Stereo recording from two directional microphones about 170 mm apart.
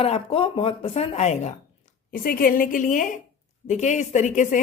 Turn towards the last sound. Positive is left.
turn(degrees=45)  # may be behind; listen again after turning